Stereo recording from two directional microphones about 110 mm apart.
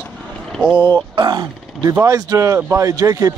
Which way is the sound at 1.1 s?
40° right (ahead or behind).